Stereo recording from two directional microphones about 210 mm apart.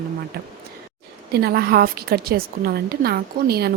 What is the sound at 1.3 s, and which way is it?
A woman's voice, 50° right (ahead or behind).